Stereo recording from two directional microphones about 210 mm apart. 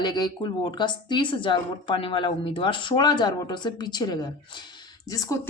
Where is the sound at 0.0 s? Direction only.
20° left (ahead or behind).